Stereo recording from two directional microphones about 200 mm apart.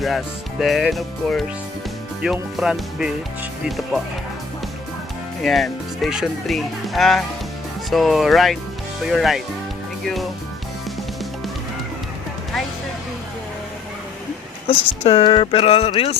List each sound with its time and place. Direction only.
0.6 s speech: centre (ahead or behind)
5.4 s speech: centre (ahead or behind)
14.7 s speech: 30° left (ahead or behind)